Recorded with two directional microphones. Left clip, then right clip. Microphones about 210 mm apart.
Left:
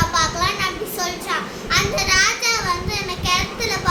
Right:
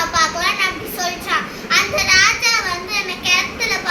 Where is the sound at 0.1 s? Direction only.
15° left (ahead or behind).